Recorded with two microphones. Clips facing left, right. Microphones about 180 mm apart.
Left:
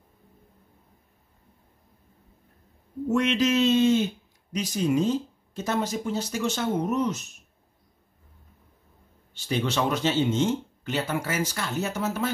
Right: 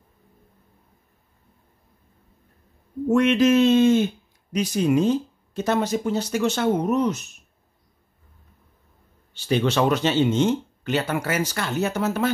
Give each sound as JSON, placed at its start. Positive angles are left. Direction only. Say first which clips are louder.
{"t": 3.1, "sound": "speech", "louder": "right 6 dB", "side_deg": -55}
{"t": 9.3, "sound": "speech", "louder": "right 6 dB", "side_deg": -70}